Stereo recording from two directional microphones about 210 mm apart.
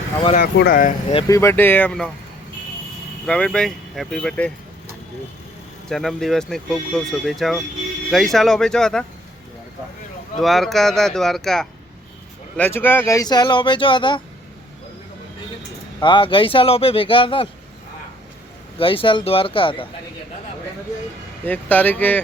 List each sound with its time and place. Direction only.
0.3 s speech: 45° left (ahead or behind)
1.1 s speech: 15° left (ahead or behind)
3.2 s speech: 5° left (ahead or behind)
5.9 s speech: centre (ahead or behind)
10.3 s speech: centre (ahead or behind); by 14.2 s 25° left (ahead or behind)
16.0 s speech: 20° left (ahead or behind)
18.8 s speech: 25° left (ahead or behind)
21.4 s speech: 10° left (ahead or behind)